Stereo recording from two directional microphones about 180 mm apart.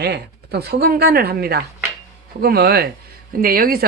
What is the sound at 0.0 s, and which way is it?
Mechanisms, 65° right (ahead or behind).